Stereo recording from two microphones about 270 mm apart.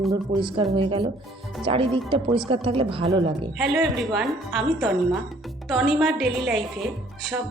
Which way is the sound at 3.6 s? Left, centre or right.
Centre.